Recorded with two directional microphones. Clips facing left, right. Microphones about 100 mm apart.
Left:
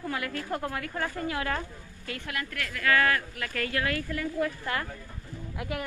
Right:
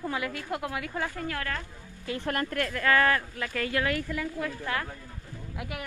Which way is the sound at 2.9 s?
25° right (ahead or behind).